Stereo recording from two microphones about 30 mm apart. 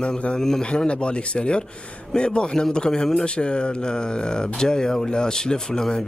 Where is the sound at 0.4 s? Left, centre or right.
Centre.